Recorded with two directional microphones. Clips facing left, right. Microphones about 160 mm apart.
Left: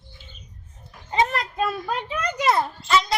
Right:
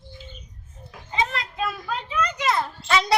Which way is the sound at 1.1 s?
45° left (ahead or behind).